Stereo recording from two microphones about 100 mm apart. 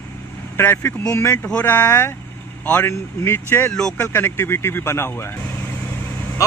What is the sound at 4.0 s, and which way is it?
Speech, 20° left (ahead or behind).